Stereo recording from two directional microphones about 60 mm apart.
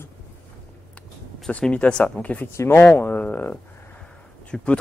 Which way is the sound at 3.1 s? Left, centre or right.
Left.